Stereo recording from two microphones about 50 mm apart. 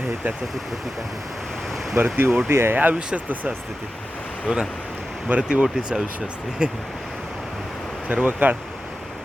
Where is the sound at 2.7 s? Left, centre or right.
Right.